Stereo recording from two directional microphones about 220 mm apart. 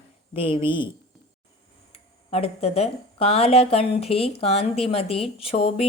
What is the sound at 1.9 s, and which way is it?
Speech, 25° left (ahead or behind).